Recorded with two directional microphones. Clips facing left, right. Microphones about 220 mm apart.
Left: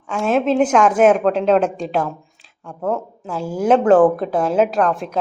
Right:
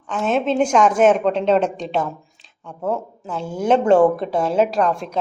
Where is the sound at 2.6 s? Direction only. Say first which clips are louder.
Left 1 dB; 5° right (ahead or behind).